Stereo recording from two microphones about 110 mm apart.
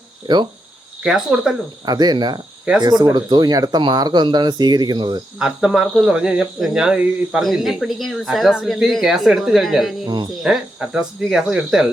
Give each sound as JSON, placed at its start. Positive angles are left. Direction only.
{"t": 1.0, "sound": "cricket", "side_deg": -5}
{"t": 1.8, "sound": "speech", "side_deg": -35}
{"t": 2.7, "sound": "cricket", "side_deg": -10}
{"t": 3.0, "sound": "speech", "side_deg": -40}
{"t": 5.4, "sound": "speech", "side_deg": -5}